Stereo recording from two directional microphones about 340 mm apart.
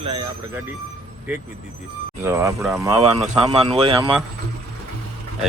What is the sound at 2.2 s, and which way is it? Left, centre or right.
Speech, centre.